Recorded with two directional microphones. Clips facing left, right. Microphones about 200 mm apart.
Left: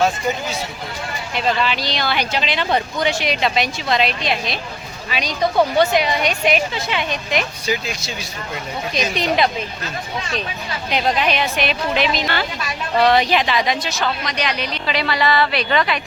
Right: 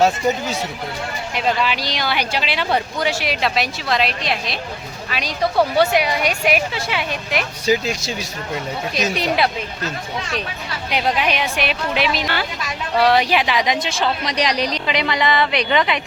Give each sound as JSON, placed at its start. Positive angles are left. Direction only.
{"t": 1.4, "sound": "speech", "side_deg": -10}
{"t": 7.7, "sound": "speech", "side_deg": -40}
{"t": 9.1, "sound": "speech", "side_deg": -10}
{"t": 10.9, "sound": "speech", "side_deg": -10}
{"t": 14.8, "sound": "speech", "side_deg": -20}